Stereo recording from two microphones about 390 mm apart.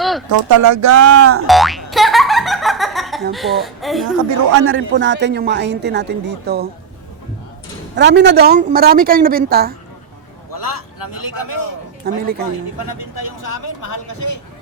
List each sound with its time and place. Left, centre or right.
0.3 s speech: right
1.5 s boing: centre
3.3 s speech: centre
4.5 s a man's voice: right
7.9 s a man's voice: right
10.5 s a man's voice: left
12.0 s a man's voice: right
13.1 s speech: left